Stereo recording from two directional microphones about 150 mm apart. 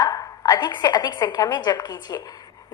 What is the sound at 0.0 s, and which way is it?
A woman's voice, 25° left (ahead or behind).